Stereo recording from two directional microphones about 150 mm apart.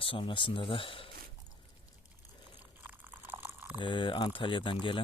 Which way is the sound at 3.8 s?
35° left (ahead or behind).